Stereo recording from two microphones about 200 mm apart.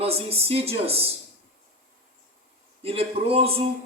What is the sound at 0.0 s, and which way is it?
A man's voice, 30° right (ahead or behind).